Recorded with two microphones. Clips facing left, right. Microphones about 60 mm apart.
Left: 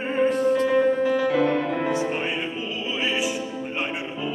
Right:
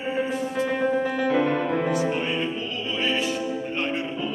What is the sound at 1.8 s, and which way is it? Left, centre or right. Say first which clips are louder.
Music: even; left.